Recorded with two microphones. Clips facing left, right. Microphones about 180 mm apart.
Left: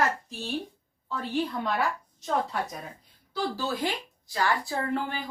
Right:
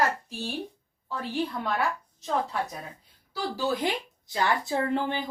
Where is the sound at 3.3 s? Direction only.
15° right (ahead or behind).